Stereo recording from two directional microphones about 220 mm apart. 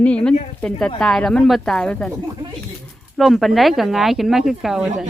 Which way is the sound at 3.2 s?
Centre (ahead or behind).